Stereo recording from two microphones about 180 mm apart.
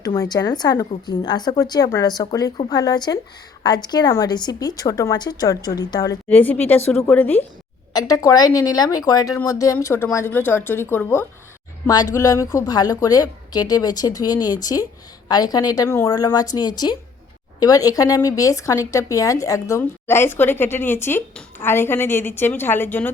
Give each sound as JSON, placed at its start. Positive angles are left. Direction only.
{"t": 0.2, "sound": "a woman's voice", "side_deg": 20}
{"t": 6.2, "sound": "a woman's voice", "side_deg": 10}
{"t": 7.9, "sound": "a woman's voice", "side_deg": 20}